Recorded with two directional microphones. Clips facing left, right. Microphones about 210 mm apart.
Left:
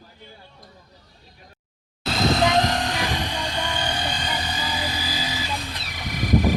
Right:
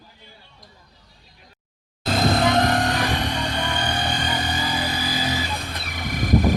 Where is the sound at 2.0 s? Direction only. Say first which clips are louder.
Right 1 dB; 55° right (ahead or behind).